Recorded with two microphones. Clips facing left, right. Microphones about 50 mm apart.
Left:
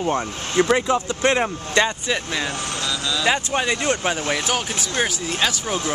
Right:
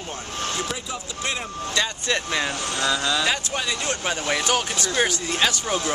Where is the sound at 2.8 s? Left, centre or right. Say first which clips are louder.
Right 4 dB; right.